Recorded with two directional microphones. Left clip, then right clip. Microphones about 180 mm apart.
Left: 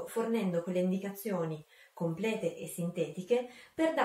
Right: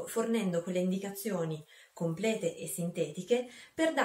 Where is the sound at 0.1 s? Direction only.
20° right (ahead or behind).